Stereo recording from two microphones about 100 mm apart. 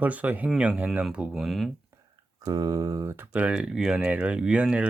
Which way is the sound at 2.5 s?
40° right (ahead or behind).